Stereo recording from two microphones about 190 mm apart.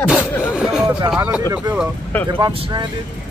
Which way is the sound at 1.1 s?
10° right (ahead or behind).